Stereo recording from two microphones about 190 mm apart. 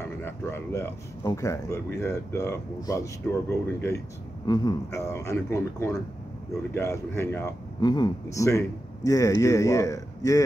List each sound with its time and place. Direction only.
0.2 s a man's voice: 10° left (ahead or behind)